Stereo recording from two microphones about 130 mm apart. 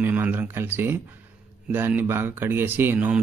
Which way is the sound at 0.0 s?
15° right (ahead or behind).